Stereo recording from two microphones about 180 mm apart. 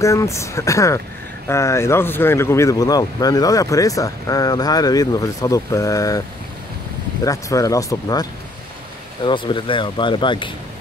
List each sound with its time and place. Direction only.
0.0 s speech: 15° left (ahead or behind)
7.2 s speech: 20° left (ahead or behind)